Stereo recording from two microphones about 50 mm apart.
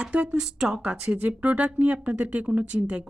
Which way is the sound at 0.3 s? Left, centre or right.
Centre.